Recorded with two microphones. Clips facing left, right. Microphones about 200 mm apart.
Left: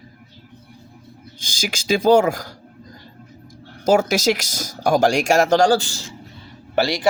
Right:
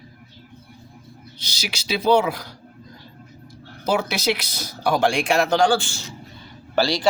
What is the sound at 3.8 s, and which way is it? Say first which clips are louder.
Speech: left 6 dB; 45° left (ahead or behind).